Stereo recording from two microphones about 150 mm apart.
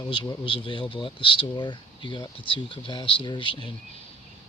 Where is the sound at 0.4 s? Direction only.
35° left (ahead or behind).